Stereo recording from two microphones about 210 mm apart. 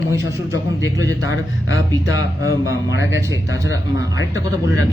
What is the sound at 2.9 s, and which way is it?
Speech, 60° left (ahead or behind).